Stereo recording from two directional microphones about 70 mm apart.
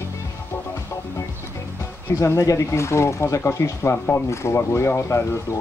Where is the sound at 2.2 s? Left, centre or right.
Left.